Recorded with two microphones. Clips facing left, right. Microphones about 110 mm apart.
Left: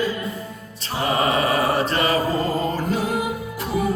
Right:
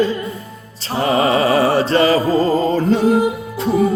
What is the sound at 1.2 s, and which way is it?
Music, 30° right (ahead or behind).